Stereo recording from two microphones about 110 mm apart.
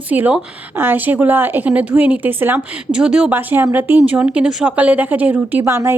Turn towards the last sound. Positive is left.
turn(degrees=-25)  # may be behind; listen again after turning